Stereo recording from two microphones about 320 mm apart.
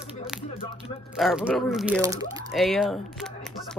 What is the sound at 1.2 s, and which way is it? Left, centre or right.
Speech, centre.